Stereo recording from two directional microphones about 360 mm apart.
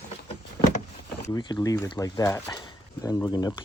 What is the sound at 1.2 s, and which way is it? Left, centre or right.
Speech, centre.